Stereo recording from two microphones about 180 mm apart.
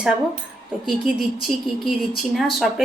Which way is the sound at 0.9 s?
Centre (ahead or behind).